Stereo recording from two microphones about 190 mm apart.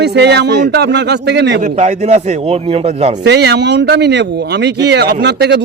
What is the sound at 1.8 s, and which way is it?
A man's voice, 35° right (ahead or behind).